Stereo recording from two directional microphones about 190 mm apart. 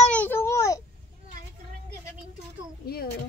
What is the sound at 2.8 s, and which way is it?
Speech, 55° left (ahead or behind).